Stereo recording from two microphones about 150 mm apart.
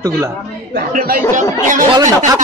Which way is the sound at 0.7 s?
75° right (ahead or behind).